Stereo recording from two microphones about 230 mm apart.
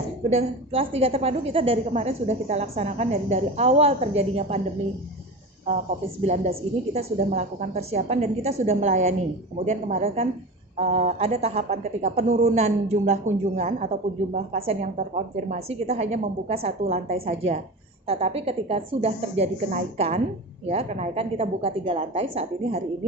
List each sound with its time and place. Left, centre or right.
0.3 s a woman's voice: right
6.2 s a woman's voice: right